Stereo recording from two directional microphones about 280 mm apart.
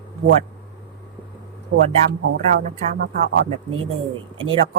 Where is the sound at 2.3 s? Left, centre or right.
Right.